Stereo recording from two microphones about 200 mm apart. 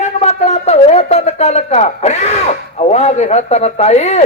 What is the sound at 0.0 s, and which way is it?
Speech, 35° left (ahead or behind).